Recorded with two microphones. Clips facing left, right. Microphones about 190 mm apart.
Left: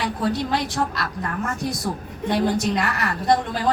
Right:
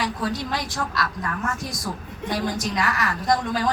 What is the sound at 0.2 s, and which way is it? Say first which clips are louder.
Speech: left 4 dB; 60° left (ahead or behind).